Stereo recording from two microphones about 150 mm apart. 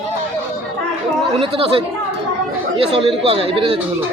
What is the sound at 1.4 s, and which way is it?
Speech, 40° right (ahead or behind).